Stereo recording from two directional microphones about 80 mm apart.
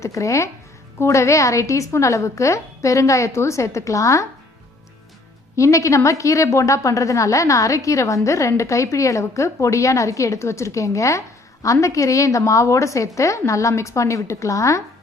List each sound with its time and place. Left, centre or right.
0.0 s a woman's voice: left
5.5 s a woman's voice: left